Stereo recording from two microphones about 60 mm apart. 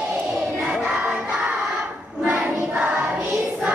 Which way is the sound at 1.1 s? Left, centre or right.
Right.